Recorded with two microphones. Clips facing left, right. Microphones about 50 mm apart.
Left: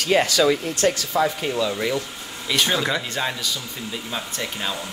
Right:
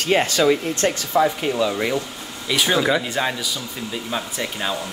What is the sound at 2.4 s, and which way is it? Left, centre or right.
A man's voice, centre.